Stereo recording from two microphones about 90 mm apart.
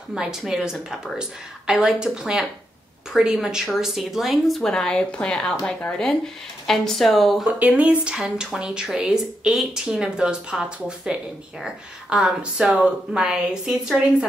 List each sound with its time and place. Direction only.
0.1 s speech: 5° right (ahead or behind); by 5.6 s 10° left (ahead or behind)
6.7 s speech: 5° left (ahead or behind)
7.5 s speech: 15° right (ahead or behind)